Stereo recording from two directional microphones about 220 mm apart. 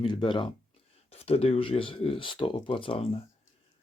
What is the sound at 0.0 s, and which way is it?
Speech, 20° left (ahead or behind).